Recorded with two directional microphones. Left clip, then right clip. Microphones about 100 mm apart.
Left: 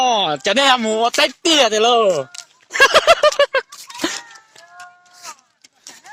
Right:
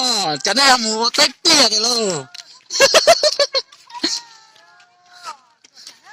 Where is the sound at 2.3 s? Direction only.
30° left (ahead or behind).